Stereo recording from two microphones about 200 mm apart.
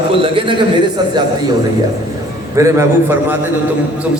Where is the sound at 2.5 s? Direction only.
15° right (ahead or behind).